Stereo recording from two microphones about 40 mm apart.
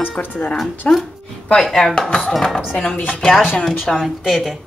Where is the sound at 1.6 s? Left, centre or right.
Centre.